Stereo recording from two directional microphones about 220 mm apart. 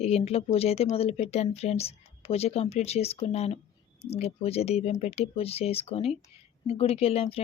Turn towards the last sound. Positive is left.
turn(degrees=25)  # may be behind; listen again after turning